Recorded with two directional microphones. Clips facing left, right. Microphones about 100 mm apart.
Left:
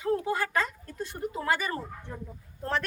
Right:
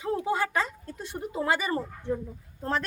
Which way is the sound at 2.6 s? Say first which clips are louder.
Right 1 dB; 25° right (ahead or behind).